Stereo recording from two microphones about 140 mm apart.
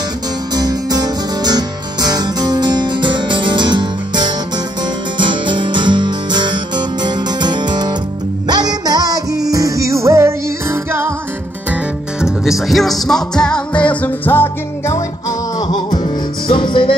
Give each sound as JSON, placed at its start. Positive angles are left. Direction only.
{"t": 0.6, "sound": "music", "side_deg": -30}
{"t": 12.2, "sound": "music", "side_deg": 0}
{"t": 15.7, "sound": "music", "side_deg": 30}